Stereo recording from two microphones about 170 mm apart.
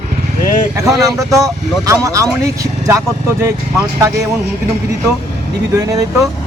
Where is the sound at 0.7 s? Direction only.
20° right (ahead or behind).